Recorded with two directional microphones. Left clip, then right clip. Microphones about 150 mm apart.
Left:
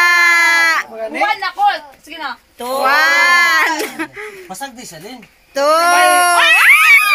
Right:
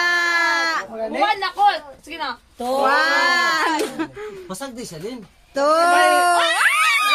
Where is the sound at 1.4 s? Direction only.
90° right.